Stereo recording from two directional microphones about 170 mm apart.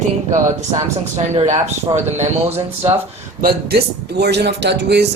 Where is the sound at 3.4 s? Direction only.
65° right (ahead or behind); by 5.1 s 80° right.